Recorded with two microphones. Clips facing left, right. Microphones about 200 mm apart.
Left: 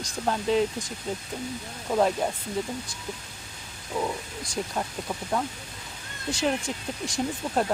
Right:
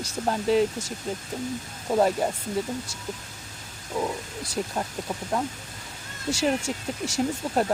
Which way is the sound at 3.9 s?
5° right (ahead or behind).